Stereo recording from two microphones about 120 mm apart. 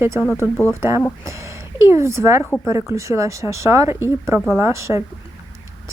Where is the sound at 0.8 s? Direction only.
25° right (ahead or behind).